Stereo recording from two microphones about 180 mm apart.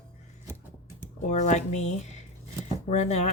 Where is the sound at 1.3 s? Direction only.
40° left (ahead or behind).